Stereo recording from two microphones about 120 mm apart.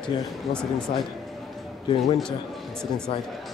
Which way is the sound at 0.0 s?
10° left (ahead or behind).